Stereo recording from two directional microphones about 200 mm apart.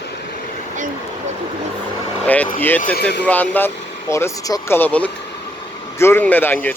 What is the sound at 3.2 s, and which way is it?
Speech, 10° left (ahead or behind).